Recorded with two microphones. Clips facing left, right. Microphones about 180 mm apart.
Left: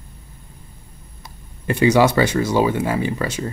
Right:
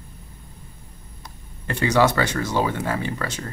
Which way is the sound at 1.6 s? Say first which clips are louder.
Left 4 dB; 10° left (ahead or behind).